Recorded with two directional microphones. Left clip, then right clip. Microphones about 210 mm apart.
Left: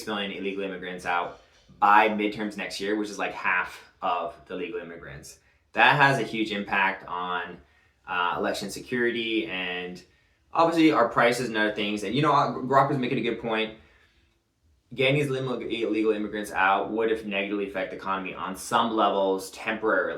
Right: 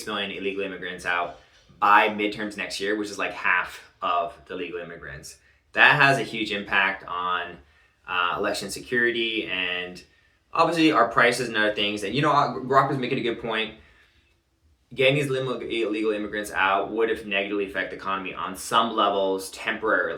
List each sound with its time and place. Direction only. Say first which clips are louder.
0.1 s speech: right 3 dB; centre (ahead or behind)
14.9 s speech: right 3 dB; centre (ahead or behind)